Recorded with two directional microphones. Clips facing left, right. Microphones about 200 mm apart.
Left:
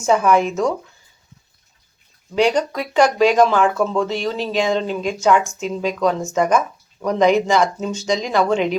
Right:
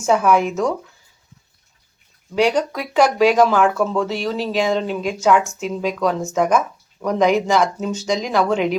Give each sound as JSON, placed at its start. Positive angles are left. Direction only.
{"t": 0.1, "sound": "speech", "side_deg": -5}
{"t": 2.3, "sound": "speech", "side_deg": -5}